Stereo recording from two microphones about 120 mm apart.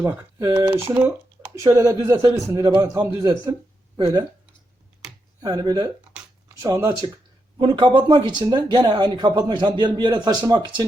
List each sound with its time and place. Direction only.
0.0 s speech: 25° right (ahead or behind)
1.5 s speech: 30° right (ahead or behind)
5.4 s speech: 35° right (ahead or behind)
7.6 s speech: 45° right (ahead or behind)